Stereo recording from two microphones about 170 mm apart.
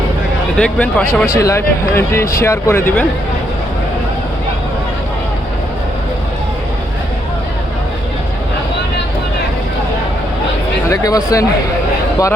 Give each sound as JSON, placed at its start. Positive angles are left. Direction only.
{"t": 0.5, "sound": "speech", "side_deg": 5}
{"t": 1.0, "sound": "speech", "side_deg": 15}
{"t": 10.8, "sound": "speech", "side_deg": 20}